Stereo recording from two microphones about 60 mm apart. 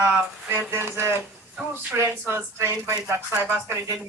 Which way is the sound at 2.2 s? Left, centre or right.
Right.